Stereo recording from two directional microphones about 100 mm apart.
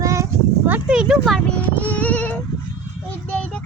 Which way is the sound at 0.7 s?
10° right (ahead or behind).